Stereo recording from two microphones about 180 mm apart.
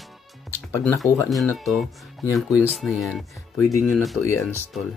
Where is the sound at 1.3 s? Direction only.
Centre (ahead or behind).